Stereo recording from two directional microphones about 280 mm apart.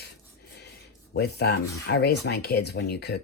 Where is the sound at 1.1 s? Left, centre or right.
Left.